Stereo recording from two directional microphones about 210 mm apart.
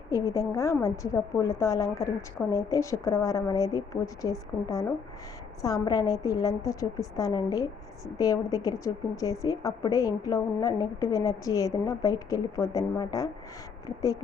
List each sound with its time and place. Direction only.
0.1 s a woman's voice: 15° left (ahead or behind)